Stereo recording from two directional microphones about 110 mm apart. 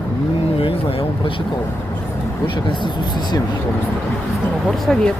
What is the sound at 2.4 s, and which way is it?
Speech, 45° left (ahead or behind).